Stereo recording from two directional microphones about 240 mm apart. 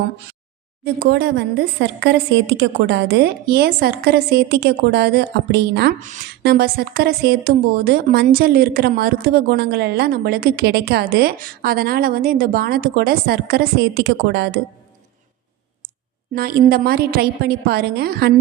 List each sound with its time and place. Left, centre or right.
0.9 s a woman's voice: right
16.3 s a woman's voice: right